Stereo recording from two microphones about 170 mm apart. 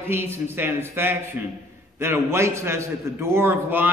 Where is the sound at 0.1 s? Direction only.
15° right (ahead or behind).